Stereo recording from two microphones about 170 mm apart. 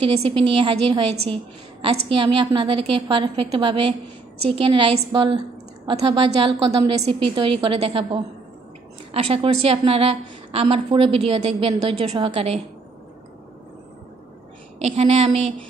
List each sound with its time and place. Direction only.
0.0 s a woman's voice: 30° right (ahead or behind)
14.8 s a woman's voice: 40° right (ahead or behind)